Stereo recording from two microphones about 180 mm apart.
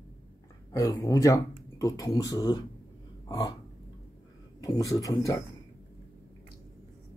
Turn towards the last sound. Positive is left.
turn(degrees=20)  # may be behind; listen again after turning